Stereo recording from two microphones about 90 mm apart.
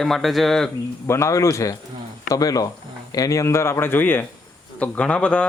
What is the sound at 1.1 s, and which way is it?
Speech, 35° left (ahead or behind).